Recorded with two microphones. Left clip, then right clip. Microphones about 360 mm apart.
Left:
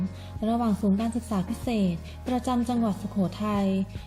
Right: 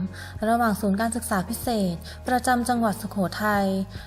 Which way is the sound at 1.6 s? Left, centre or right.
Centre.